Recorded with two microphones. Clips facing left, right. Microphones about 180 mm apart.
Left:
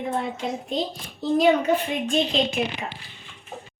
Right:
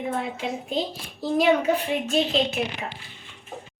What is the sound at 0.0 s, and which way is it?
A child's voice, 5° right (ahead or behind).